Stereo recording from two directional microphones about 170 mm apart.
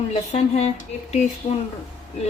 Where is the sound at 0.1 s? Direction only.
40° left (ahead or behind).